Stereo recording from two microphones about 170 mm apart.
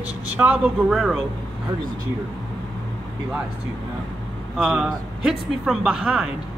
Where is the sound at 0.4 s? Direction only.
5° right (ahead or behind).